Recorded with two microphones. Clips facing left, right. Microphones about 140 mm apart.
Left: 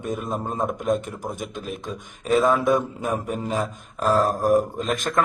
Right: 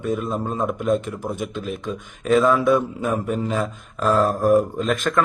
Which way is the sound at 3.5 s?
35° left (ahead or behind).